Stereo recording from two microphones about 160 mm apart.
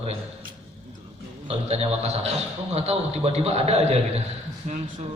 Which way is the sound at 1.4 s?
40° right (ahead or behind).